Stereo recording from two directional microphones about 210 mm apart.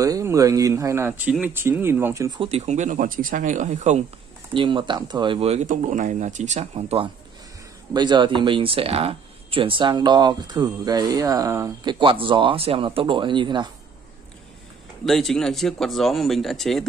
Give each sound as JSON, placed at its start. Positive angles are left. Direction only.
{"t": 0.0, "sound": "speech", "side_deg": -15}
{"t": 4.6, "sound": "speech", "side_deg": -20}
{"t": 15.0, "sound": "speech", "side_deg": 0}